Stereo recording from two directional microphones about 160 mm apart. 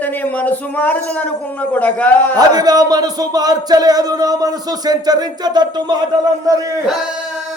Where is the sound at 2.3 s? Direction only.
25° right (ahead or behind).